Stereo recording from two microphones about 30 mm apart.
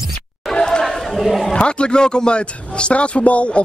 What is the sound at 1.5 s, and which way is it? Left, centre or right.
A man's voice, left.